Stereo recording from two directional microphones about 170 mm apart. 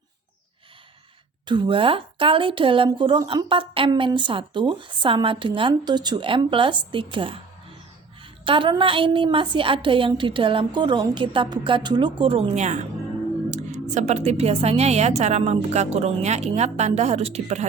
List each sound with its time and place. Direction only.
1.5 s a woman's voice: 30° right (ahead or behind)